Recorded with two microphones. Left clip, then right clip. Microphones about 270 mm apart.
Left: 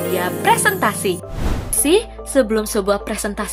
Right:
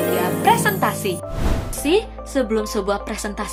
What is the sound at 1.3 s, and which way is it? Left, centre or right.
Music, centre.